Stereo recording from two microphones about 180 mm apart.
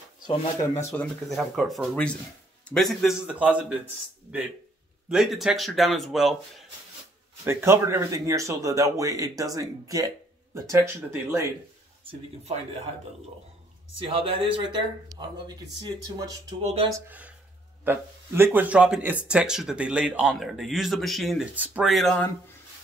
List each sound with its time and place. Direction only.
0.9 s speech: centre (ahead or behind)
7.4 s speech: 15° right (ahead or behind)
12.0 s speech: 30° right (ahead or behind)
13.9 s speech: 30° right (ahead or behind)
16.6 s speech: 30° right (ahead or behind)
16.9 s speech: 10° right (ahead or behind)